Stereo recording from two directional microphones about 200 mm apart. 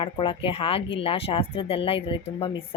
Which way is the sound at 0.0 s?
25° left (ahead or behind).